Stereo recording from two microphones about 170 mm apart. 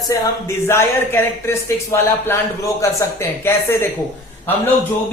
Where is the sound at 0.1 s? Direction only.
15° left (ahead or behind).